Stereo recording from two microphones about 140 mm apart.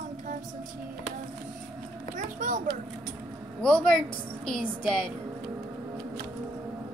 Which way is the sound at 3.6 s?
5° left (ahead or behind).